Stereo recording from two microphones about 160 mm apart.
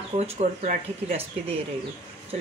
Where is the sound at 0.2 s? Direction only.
45° right (ahead or behind).